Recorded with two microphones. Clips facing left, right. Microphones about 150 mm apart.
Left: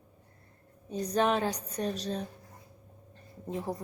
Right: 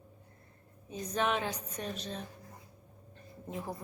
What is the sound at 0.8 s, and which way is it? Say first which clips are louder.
A woman's voice: left 5 dB; 35° left (ahead or behind).